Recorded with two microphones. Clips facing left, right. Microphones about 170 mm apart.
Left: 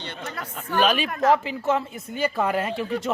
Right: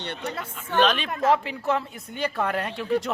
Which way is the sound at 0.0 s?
65° right (ahead or behind).